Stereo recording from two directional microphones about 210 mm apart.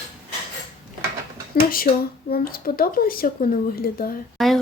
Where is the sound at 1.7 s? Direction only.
45° left (ahead or behind).